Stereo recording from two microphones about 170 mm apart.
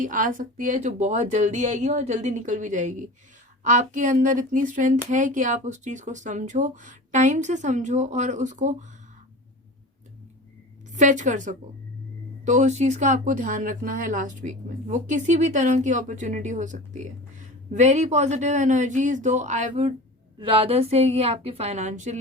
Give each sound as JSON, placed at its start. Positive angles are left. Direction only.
{"t": 0.0, "sound": "speech", "side_deg": -50}
{"t": 10.9, "sound": "a woman's voice", "side_deg": -45}